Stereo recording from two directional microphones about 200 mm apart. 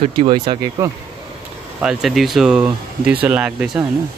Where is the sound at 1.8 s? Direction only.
Centre (ahead or behind).